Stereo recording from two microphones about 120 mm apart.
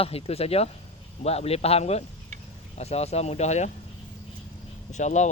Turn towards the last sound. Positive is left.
turn(degrees=80)